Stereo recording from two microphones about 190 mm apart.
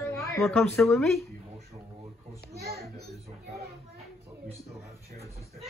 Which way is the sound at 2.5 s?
55° right (ahead or behind).